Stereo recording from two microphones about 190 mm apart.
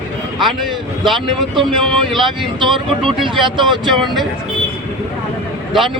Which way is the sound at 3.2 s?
25° right (ahead or behind).